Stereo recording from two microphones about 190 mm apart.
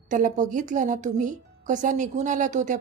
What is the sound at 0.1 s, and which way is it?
A woman's voice, 45° right (ahead or behind).